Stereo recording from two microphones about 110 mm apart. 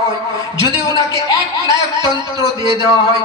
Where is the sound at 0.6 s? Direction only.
30° left (ahead or behind).